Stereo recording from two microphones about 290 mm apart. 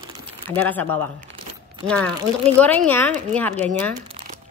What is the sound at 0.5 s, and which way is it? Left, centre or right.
A woman's voice, centre.